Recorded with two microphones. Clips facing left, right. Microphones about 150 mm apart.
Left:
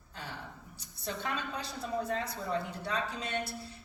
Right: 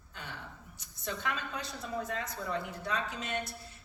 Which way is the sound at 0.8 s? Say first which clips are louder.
Even; 30° left (ahead or behind).